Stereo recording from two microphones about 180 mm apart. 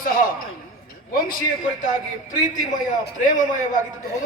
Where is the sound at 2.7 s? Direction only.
45° left (ahead or behind).